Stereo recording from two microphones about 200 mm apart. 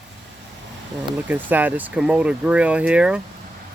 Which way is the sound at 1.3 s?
10° right (ahead or behind).